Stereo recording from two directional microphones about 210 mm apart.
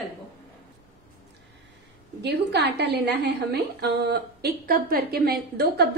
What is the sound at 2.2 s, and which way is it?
A woman's voice, 50° right (ahead or behind).